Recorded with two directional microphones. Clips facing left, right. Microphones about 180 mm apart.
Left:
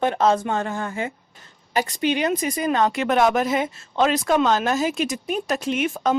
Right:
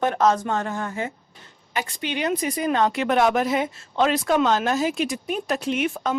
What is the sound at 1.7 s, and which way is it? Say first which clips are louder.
Speech: left 6 dB; 40° left (ahead or behind).